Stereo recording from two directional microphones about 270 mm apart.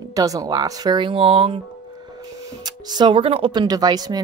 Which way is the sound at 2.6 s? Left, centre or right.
Centre.